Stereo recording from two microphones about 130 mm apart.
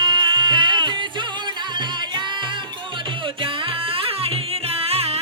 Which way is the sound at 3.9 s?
45° right (ahead or behind).